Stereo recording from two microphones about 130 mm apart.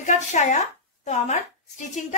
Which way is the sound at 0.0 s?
70° left (ahead or behind).